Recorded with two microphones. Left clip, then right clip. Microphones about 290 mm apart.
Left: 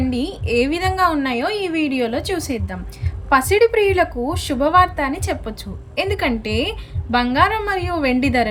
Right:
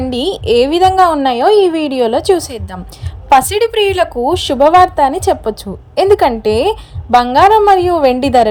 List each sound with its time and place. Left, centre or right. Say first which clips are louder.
0.1 s a woman's voice: right 9 dB; right